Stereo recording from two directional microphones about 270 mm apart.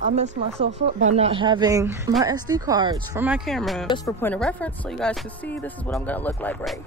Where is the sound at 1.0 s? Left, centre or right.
Right.